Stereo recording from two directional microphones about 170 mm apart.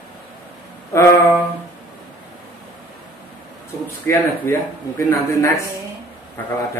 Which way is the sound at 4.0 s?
15° left (ahead or behind).